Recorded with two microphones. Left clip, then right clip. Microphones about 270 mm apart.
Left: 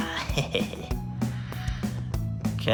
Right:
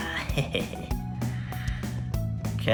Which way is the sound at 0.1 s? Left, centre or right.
Centre.